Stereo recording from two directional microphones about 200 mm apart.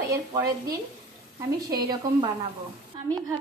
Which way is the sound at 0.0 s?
15° right (ahead or behind).